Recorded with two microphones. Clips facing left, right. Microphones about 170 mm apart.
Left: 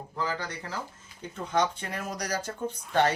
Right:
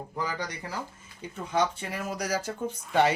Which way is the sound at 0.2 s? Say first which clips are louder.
Left 1 dB; 15° right (ahead or behind).